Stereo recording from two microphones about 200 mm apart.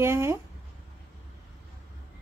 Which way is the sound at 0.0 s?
15° right (ahead or behind).